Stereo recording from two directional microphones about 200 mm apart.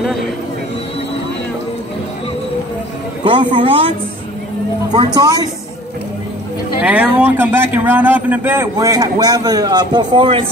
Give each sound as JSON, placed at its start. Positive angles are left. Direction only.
{"t": 3.5, "sound": "a woman's voice", "side_deg": -30}
{"t": 4.9, "sound": "a woman's voice", "side_deg": -20}
{"t": 6.8, "sound": "a man's voice", "side_deg": -5}